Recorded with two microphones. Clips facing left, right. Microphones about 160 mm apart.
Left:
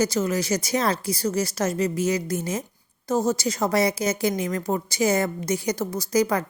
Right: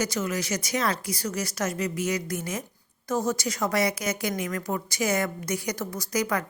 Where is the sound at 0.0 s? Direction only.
30° left (ahead or behind).